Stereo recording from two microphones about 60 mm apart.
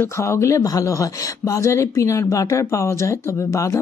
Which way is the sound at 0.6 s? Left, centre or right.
Left.